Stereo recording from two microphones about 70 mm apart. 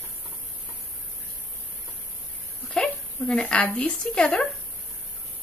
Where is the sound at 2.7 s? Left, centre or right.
Centre.